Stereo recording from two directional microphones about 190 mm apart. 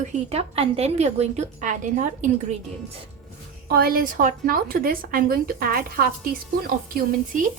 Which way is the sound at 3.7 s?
50° right (ahead or behind).